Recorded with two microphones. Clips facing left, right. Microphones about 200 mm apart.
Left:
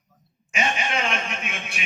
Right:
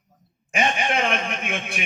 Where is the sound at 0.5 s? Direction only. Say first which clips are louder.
Right 3 dB; 55° right (ahead or behind).